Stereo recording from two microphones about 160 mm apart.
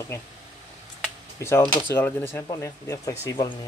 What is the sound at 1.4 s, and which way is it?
Speech, 15° left (ahead or behind).